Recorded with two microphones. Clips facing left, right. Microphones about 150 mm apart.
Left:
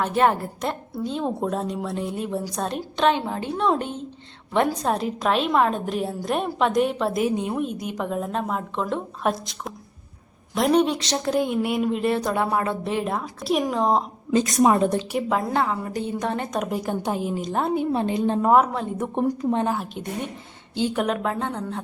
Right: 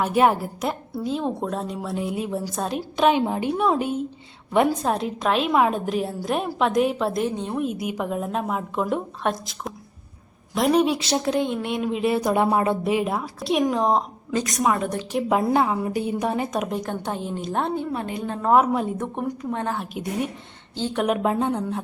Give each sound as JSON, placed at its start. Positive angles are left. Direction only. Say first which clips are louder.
{"t": 0.0, "sound": "a woman's voice", "louder": "right 1 dB", "side_deg": -10}
{"t": 7.6, "sound": "a woman's voice", "louder": "right 1 dB", "side_deg": -5}
{"t": 9.2, "sound": "a woman's voice", "louder": "left 1 dB", "side_deg": 0}
{"t": 14.3, "sound": "a woman's voice", "louder": "left 6 dB", "side_deg": 25}
{"t": 15.3, "sound": "a woman's voice", "louder": "right 4 dB", "side_deg": -10}
{"t": 17.9, "sound": "a woman's voice", "louder": "left 6 dB", "side_deg": 25}
{"t": 18.5, "sound": "a woman's voice", "louder": "right 3 dB", "side_deg": -5}
{"t": 19.1, "sound": "a woman's voice", "louder": "left 5 dB", "side_deg": 25}
{"t": 19.6, "sound": "a woman's voice", "louder": "left 2 dB", "side_deg": 5}
{"t": 19.9, "sound": "a woman's voice", "louder": "right 3 dB", "side_deg": -10}
{"t": 20.7, "sound": "speech", "louder": "left 3 dB", "side_deg": 15}
{"t": 21.1, "sound": "a woman's voice", "louder": "right 4 dB", "side_deg": -15}